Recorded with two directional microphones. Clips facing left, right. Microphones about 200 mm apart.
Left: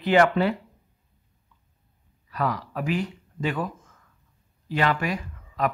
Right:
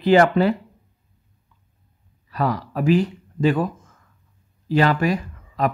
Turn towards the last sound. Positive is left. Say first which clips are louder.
# right 4 dB
turn(degrees=-35)  # may be behind; listen again after turning